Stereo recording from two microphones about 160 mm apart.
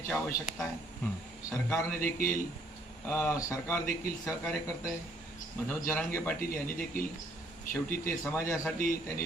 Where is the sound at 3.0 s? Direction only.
15° left (ahead or behind).